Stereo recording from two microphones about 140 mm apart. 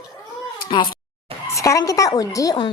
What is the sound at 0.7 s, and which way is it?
Speech, 35° left (ahead or behind).